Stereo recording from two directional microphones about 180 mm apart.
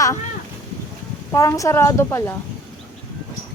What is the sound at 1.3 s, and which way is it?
Speech, 15° left (ahead or behind).